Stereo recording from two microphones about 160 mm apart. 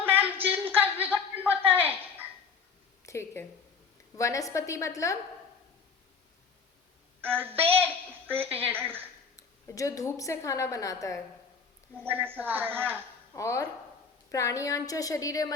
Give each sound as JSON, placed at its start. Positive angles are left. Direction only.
{"t": 0.0, "sound": "a sound", "side_deg": -10}
{"t": 1.5, "sound": "dog", "side_deg": -10}
{"t": 3.0, "sound": "a woman's voice", "side_deg": 15}
{"t": 7.2, "sound": "a woman's voice", "side_deg": -10}
{"t": 9.3, "sound": "a woman's voice", "side_deg": 20}
{"t": 12.0, "sound": "a woman's voice", "side_deg": -10}
{"t": 13.3, "sound": "a woman's voice", "side_deg": 20}